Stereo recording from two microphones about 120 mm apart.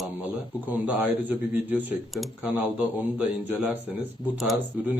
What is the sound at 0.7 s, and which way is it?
A man's voice, 15° right (ahead or behind).